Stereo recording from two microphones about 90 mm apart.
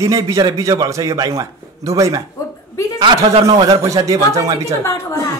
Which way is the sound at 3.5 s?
45° right (ahead or behind).